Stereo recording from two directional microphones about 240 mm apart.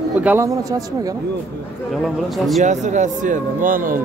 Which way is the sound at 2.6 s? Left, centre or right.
Right.